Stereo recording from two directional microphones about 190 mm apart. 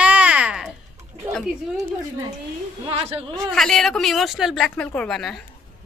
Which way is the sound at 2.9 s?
30° right (ahead or behind).